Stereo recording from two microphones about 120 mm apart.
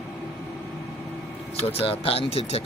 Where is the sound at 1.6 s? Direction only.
55° left (ahead or behind).